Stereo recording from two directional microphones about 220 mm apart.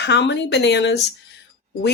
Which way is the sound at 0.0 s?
50° left (ahead or behind).